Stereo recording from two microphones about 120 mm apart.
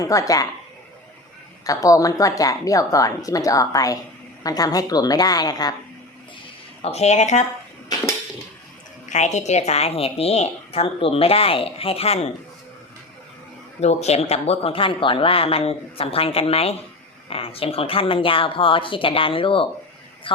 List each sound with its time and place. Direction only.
0.0 s a woman's voice: 30° left (ahead or behind)
1.6 s a woman's voice: 30° left (ahead or behind)
6.8 s speech: 65° left (ahead or behind)
9.0 s a woman's voice: 80° left; by 12.3 s 60° left (ahead or behind)
13.8 s speech: 65° left (ahead or behind); by 20.4 s 45° left (ahead or behind)